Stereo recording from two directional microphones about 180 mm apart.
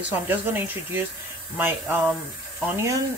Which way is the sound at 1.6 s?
10° right (ahead or behind).